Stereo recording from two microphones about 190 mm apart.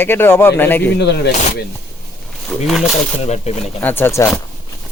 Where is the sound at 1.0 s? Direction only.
60° left (ahead or behind).